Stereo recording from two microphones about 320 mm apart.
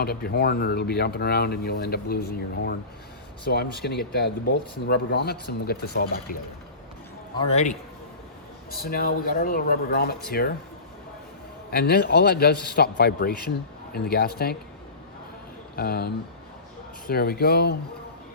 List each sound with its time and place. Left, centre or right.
0.0 s speech: left
7.4 s speech: left
11.7 s speech: left
15.7 s speech: left